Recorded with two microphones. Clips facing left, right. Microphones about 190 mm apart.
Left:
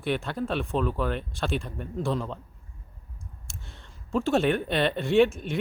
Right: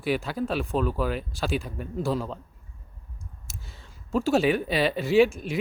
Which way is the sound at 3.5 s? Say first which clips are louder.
Right 1 dB; centre (ahead or behind).